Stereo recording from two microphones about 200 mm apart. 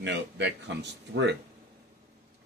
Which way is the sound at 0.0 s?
60° right (ahead or behind).